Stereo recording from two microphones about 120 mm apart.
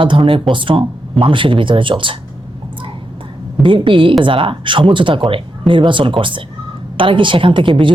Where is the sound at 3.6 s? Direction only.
45° right (ahead or behind).